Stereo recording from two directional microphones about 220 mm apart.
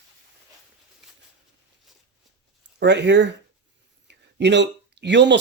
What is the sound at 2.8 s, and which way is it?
Speech, 55° right (ahead or behind).